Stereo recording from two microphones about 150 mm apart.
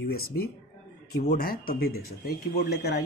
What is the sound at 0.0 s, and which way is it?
Speech, 90° left.